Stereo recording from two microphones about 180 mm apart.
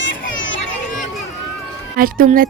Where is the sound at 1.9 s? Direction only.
50° right (ahead or behind).